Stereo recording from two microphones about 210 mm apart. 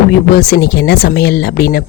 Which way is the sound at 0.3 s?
50° left (ahead or behind).